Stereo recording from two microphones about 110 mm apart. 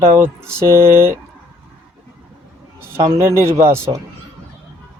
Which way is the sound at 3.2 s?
25° right (ahead or behind).